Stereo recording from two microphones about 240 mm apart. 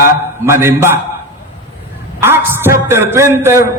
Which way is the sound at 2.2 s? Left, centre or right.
Centre.